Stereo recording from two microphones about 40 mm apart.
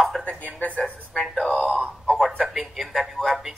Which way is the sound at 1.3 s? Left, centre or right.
Centre.